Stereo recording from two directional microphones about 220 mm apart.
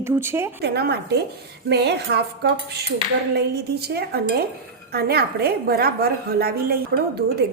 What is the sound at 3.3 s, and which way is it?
A woman's voice, 45° right (ahead or behind).